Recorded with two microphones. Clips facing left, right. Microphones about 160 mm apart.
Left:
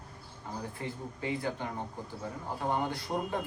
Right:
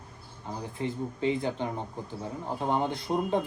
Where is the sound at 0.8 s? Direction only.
20° right (ahead or behind).